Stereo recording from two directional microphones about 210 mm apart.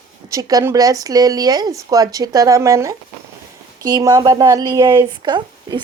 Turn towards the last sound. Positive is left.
turn(degrees=-20)  # may be behind; listen again after turning